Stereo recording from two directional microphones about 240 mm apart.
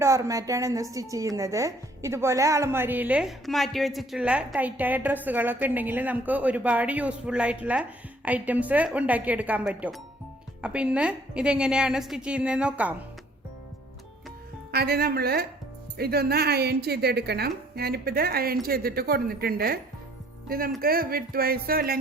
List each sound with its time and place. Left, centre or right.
0.0 s a woman's voice: centre
14.7 s speech: right